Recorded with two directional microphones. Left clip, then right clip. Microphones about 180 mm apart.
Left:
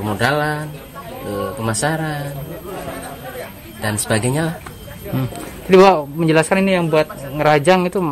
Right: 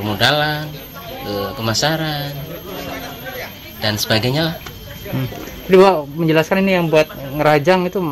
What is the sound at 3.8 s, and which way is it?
Speech, 15° left (ahead or behind).